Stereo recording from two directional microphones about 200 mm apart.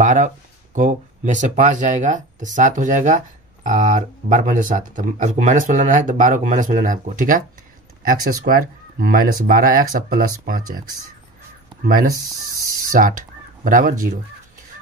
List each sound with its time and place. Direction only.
0.0 s speech: 40° right (ahead or behind)
11.8 s speech: 45° right (ahead or behind)